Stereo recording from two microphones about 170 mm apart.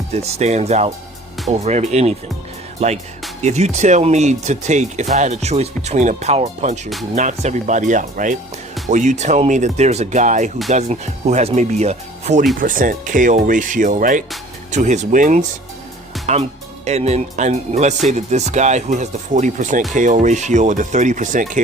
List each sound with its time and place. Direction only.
0.1 s speech: 40° right (ahead or behind)
12.5 s speech: 55° right (ahead or behind)